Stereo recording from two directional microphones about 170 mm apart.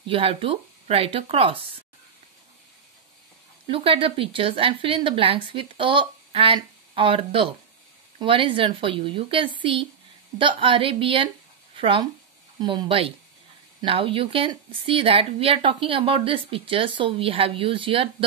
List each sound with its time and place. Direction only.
0.0 s speech: 35° right (ahead or behind)
3.6 s speech: 35° right (ahead or behind)